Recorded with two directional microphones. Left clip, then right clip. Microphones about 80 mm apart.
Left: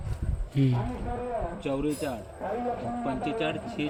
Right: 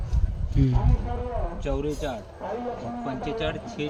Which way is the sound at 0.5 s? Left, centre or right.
Right.